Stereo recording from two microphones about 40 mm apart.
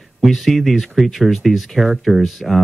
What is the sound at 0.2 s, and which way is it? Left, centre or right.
A man's voice, centre.